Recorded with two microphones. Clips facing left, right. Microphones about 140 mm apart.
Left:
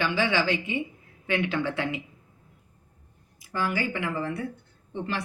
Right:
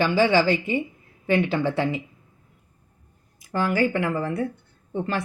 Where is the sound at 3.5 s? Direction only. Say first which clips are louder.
Right 6 dB; 45° right (ahead or behind).